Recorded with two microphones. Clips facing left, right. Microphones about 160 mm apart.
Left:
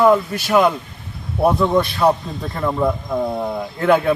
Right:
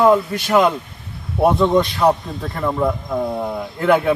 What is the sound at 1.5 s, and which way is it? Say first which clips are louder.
Speech: right 1 dB; 20° right (ahead or behind).